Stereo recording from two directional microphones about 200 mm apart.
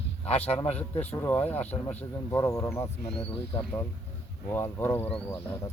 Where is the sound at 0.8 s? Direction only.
10° left (ahead or behind).